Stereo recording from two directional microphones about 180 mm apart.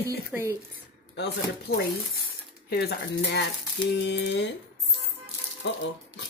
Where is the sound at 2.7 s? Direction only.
60° left (ahead or behind).